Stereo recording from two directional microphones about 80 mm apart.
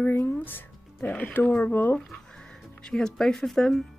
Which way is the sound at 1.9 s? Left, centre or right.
Centre.